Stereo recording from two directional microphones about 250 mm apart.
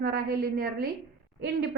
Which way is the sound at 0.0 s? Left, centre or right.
Right.